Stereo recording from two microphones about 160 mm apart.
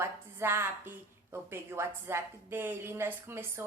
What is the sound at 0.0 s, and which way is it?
A woman's voice, 15° right (ahead or behind).